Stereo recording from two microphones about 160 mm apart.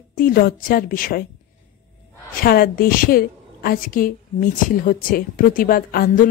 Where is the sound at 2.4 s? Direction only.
70° left (ahead or behind).